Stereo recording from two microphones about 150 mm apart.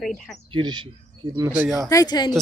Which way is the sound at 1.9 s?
25° left (ahead or behind).